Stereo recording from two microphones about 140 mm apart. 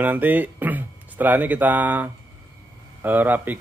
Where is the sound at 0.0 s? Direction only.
10° right (ahead or behind).